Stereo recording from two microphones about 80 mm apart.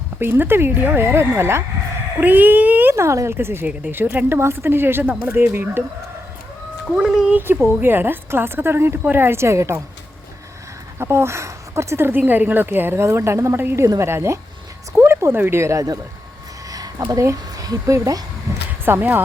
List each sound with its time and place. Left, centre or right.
0.2 s speech: right
2.2 s speech: right
2.9 s speech: right
6.9 s speech: centre
7.3 s speech: right
10.9 s speech: right
13.8 s speech: right
16.6 s a sound: right
17.2 s speech: right
18.5 s a sound: right
18.9 s speech: right